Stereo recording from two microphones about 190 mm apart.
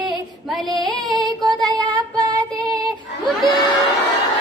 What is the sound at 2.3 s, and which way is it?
Music, 20° right (ahead or behind).